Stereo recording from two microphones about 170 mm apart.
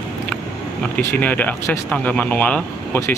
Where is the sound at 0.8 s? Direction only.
10° left (ahead or behind).